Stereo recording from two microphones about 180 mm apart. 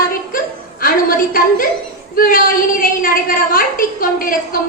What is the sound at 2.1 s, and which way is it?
A woman's voice, 55° left (ahead or behind).